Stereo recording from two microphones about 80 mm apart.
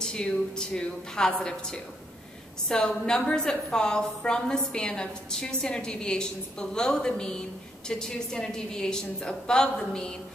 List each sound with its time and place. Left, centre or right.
0.0 s a woman's voice: centre